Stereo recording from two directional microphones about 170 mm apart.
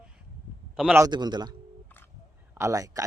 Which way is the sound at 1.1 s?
25° right (ahead or behind).